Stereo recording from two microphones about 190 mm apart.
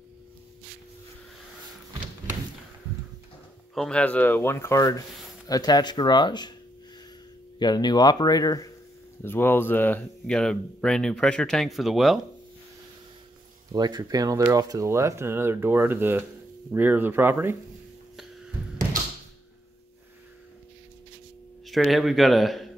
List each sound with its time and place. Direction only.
3.7 s speech: 5° left (ahead or behind); by 6.5 s 25° left (ahead or behind)
7.5 s speech: 20° left (ahead or behind); by 12.2 s centre (ahead or behind)
13.7 s speech: 20° right (ahead or behind)
21.6 s speech: centre (ahead or behind)